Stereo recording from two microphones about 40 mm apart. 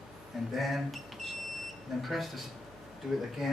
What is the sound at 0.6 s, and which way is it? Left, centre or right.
Speech, centre.